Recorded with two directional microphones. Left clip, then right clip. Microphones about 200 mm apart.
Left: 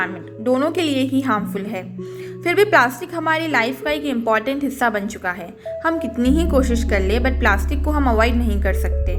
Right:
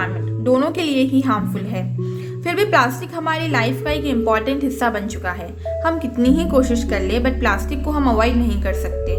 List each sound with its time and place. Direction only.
0.0 s a woman's voice: 20° left (ahead or behind)